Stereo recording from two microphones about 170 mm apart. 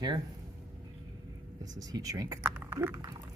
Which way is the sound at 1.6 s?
20° right (ahead or behind).